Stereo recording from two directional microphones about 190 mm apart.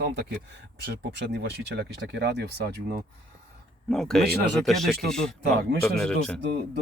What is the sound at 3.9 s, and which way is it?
Speech, centre (ahead or behind).